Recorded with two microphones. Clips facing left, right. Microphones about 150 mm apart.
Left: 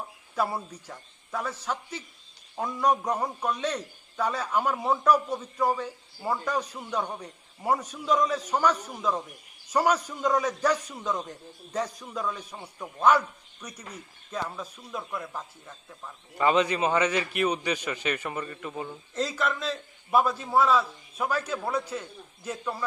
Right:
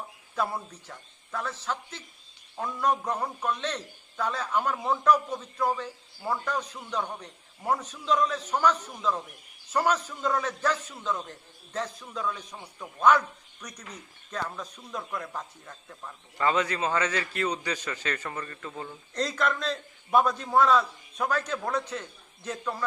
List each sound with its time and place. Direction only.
0.3 s a man's voice: 10° left (ahead or behind)
16.4 s a man's voice: 15° left (ahead or behind)
19.1 s a man's voice: 5° left (ahead or behind)